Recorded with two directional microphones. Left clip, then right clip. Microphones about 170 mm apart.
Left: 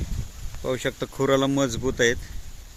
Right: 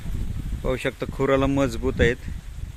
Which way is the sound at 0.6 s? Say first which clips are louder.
Right 1 dB; 5° right (ahead or behind).